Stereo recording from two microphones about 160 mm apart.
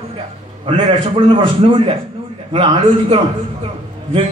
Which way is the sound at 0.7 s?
30° right (ahead or behind).